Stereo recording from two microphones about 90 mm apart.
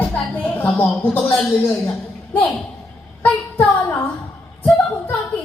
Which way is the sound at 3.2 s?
20° left (ahead or behind).